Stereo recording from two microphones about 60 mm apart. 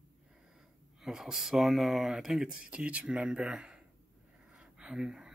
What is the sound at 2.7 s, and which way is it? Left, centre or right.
Speech, right.